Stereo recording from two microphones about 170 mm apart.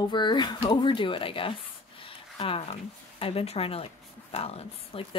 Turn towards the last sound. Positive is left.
turn(degrees=35)  # may be behind; listen again after turning